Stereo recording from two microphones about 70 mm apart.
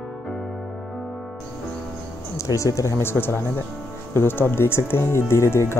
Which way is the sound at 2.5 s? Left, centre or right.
Left.